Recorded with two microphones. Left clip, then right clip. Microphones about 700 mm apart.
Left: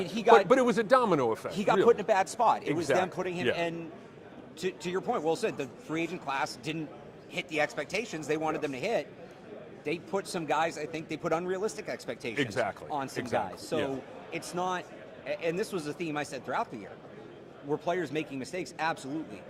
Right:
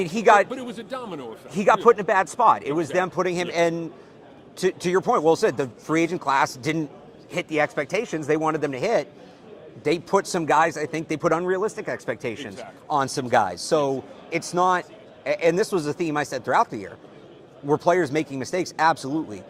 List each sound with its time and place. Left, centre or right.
0.0 s a man's voice: right
0.4 s speech: left
1.5 s a man's voice: right
12.5 s speech: left
12.9 s a man's voice: right